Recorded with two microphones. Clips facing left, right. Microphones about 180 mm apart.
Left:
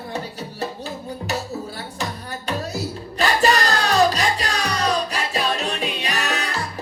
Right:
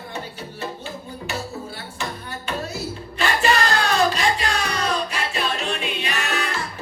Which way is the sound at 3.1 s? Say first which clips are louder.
Left 2 dB; 40° left (ahead or behind).